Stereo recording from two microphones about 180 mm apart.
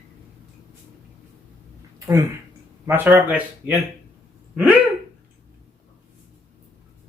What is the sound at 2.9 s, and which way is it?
Speech, 10° right (ahead or behind).